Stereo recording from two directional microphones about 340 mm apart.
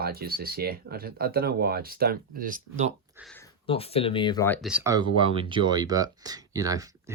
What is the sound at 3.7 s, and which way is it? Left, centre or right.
Speech, centre.